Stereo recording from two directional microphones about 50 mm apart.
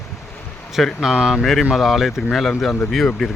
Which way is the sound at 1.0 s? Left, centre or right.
Centre.